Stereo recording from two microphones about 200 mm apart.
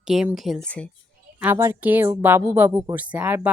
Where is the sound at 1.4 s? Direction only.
10° right (ahead or behind).